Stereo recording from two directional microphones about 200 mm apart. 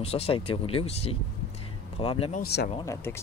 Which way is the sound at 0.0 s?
30° left (ahead or behind).